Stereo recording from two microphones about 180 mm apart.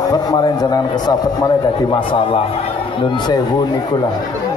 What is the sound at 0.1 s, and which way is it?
A man's voice, 20° left (ahead or behind).